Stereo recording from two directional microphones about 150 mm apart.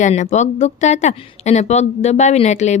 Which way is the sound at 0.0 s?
50° left (ahead or behind).